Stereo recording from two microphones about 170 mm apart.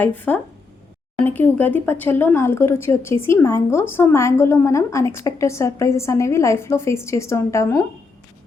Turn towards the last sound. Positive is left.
turn(degrees=15)  # may be behind; listen again after turning